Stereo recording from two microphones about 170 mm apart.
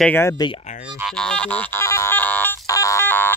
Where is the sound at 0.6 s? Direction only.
45° left (ahead or behind).